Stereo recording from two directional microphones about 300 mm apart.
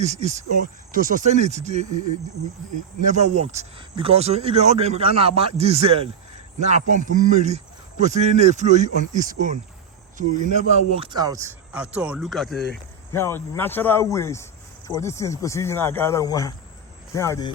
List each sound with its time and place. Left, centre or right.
0.0 s speech: right
3.1 s speech: right; by 17.5 s centre